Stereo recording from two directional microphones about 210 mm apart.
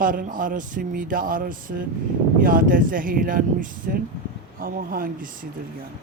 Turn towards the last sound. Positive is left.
turn(degrees=-40)  # may be behind; listen again after turning